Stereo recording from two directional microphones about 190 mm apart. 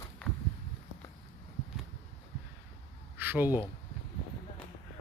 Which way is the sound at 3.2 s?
10° right (ahead or behind).